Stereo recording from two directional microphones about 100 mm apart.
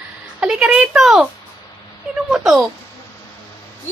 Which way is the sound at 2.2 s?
5° right (ahead or behind).